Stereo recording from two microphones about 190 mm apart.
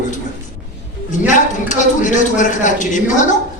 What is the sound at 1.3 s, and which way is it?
A man's voice, 40° left (ahead or behind).